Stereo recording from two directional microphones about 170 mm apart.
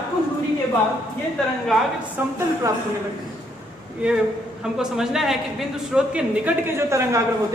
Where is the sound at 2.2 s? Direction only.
10° right (ahead or behind).